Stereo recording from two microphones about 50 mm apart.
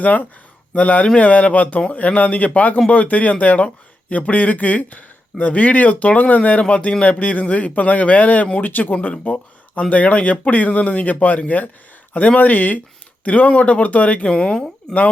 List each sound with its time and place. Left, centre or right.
0.0 s speech: left; by 14.9 s centre